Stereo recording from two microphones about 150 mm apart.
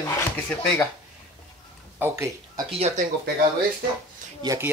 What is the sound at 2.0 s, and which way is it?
Speech, 20° right (ahead or behind).